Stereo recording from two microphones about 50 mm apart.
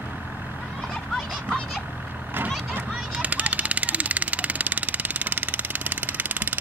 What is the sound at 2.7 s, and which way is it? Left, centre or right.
Vehicle, right.